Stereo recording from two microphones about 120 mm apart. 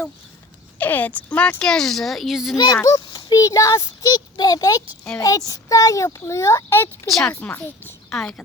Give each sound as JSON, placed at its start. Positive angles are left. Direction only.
{"t": 0.8, "sound": "speech", "side_deg": 15}
{"t": 2.8, "sound": "a child's voice", "side_deg": 35}
{"t": 7.1, "sound": "speech", "side_deg": 0}
{"t": 7.3, "sound": "speech", "side_deg": 15}
{"t": 8.1, "sound": "speech", "side_deg": 5}